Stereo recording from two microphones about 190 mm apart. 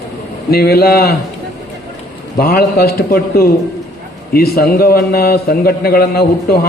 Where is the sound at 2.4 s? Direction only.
55° left (ahead or behind).